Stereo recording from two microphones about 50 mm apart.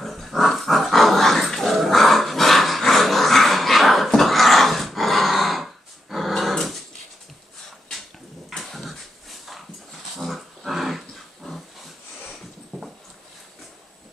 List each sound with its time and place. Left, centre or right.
0.0 s dog: centre
8.5 s dog: centre
10.1 s dog: centre
12.7 s dog: centre